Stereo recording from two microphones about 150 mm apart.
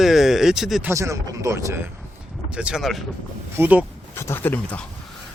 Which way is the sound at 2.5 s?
5° right (ahead or behind).